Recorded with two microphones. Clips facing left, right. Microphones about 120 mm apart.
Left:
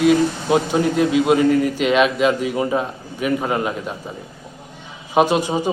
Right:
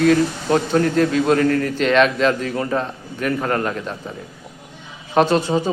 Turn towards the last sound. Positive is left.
turn(degrees=15)  # may be behind; listen again after turning